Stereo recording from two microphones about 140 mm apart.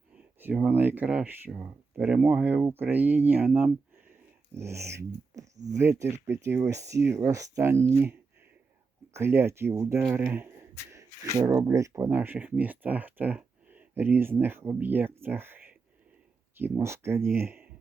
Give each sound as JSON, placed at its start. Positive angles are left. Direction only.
{"t": 0.3, "sound": "speech", "side_deg": -10}
{"t": 9.1, "sound": "speech", "side_deg": -15}